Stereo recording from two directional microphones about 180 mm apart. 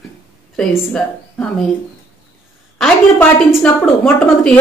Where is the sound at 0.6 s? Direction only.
5° left (ahead or behind).